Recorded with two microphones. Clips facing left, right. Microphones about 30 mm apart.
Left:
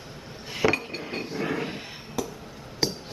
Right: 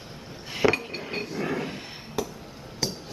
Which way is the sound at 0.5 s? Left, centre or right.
Centre.